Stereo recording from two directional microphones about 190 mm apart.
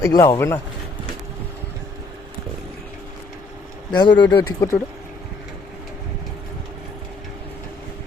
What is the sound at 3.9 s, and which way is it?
Speech, 25° left (ahead or behind).